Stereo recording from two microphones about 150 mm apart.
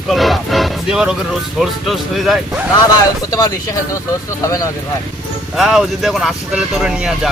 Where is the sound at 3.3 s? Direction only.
25° left (ahead or behind).